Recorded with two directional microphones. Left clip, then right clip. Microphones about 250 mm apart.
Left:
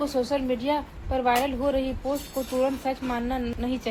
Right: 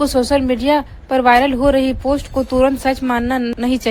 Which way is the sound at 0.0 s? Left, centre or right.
Right.